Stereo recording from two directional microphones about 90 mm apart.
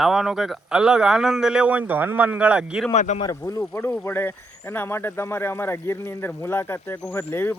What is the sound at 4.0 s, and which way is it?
Speech, 25° left (ahead or behind).